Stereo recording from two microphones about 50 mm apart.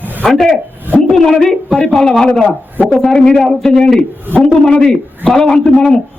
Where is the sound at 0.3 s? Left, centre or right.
Centre.